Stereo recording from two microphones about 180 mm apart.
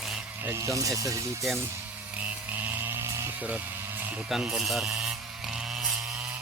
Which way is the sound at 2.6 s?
10° right (ahead or behind).